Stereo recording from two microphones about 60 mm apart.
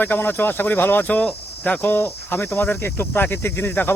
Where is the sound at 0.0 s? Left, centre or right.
Left.